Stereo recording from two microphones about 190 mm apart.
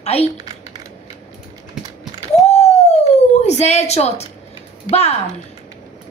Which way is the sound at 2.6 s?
35° left (ahead or behind).